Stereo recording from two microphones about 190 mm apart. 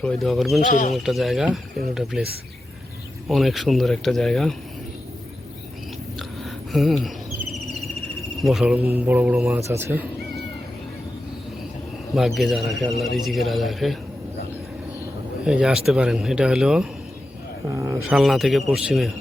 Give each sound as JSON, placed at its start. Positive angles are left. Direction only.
{"t": 0.0, "sound": "a man's voice", "side_deg": 5}
{"t": 0.7, "sound": "speech", "side_deg": 45}
{"t": 0.9, "sound": "a man's voice", "side_deg": 0}
{"t": 6.1, "sound": "a sound", "side_deg": 0}
{"t": 8.4, "sound": "a man's voice", "side_deg": 0}
{"t": 12.1, "sound": "a man's voice", "side_deg": 0}
{"t": 15.4, "sound": "a man's voice", "side_deg": -5}
{"t": 17.7, "sound": "speech", "side_deg": -15}
{"t": 18.1, "sound": "a man's voice", "side_deg": 0}